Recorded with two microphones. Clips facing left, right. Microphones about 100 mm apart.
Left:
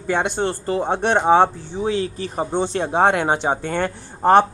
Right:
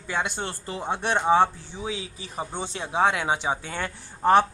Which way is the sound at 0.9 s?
60° left (ahead or behind).